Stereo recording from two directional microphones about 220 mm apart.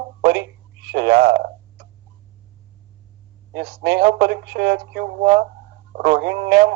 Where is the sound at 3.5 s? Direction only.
50° right (ahead or behind).